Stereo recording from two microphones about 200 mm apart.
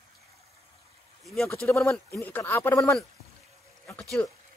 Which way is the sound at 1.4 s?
10° left (ahead or behind).